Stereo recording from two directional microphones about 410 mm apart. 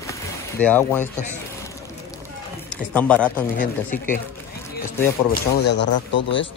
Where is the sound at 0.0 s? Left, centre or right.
Centre.